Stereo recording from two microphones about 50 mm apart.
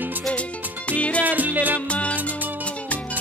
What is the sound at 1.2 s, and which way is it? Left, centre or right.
Music, right.